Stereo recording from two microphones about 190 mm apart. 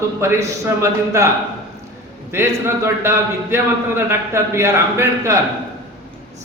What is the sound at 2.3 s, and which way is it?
Speech, 15° right (ahead or behind).